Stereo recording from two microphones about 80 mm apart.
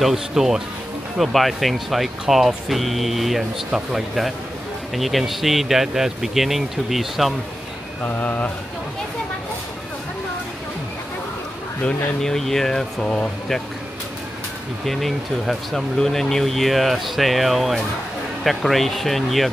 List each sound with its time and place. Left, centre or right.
0.0 s speech: centre
8.0 s speech: left
11.8 s speech: centre
14.9 s speech: centre